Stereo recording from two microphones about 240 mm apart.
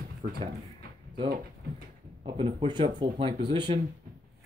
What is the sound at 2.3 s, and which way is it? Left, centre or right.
Speech, right.